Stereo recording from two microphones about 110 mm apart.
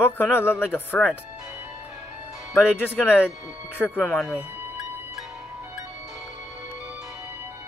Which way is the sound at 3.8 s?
15° left (ahead or behind).